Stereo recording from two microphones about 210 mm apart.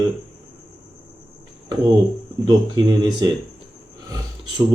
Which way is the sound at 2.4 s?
20° right (ahead or behind).